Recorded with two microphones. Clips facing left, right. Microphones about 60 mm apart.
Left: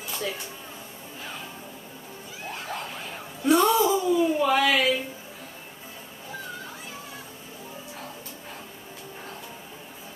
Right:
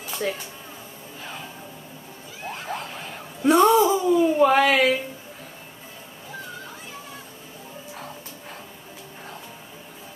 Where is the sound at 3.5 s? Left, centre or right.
Right.